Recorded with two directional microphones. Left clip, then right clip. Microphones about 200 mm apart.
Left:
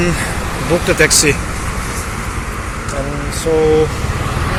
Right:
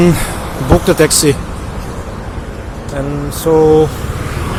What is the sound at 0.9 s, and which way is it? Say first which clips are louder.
Speech: even; 35° right (ahead or behind).